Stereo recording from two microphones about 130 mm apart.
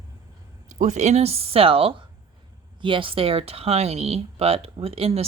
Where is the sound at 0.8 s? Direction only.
60° right (ahead or behind).